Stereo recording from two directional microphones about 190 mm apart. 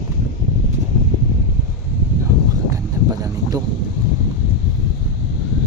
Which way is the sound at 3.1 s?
20° right (ahead or behind).